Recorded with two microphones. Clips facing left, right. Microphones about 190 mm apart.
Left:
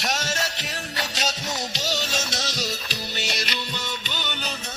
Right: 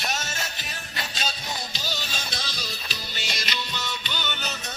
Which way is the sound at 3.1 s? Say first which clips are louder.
Left 3 dB; 65° left (ahead or behind).